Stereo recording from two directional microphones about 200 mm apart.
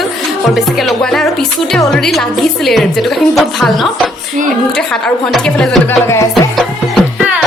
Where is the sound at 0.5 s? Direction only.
Centre (ahead or behind).